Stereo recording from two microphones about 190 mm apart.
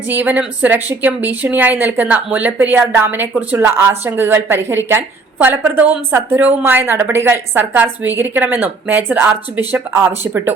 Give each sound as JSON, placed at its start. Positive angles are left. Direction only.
{"t": 0.1, "sound": "a woman's voice", "side_deg": -10}